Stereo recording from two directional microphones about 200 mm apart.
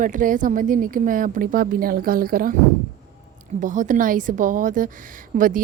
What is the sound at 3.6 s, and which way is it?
A woman's voice, 40° right (ahead or behind).